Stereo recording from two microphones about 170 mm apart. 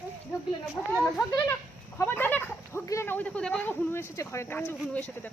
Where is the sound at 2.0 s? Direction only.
10° left (ahead or behind).